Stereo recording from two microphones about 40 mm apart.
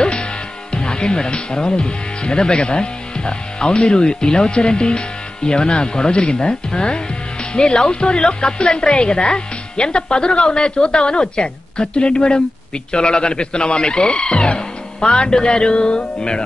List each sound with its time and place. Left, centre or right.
0.0 s music: left
0.7 s speech: left